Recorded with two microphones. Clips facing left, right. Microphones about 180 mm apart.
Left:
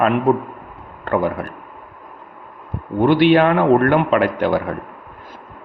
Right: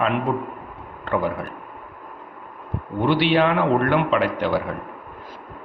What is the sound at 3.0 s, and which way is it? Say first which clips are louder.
A man's voice: left 6 dB; 50° left (ahead or behind).